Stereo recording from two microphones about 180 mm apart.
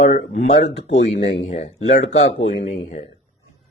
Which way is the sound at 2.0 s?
90° left.